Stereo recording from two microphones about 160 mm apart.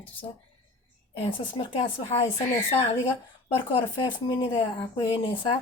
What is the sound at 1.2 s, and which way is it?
Speech, 35° left (ahead or behind).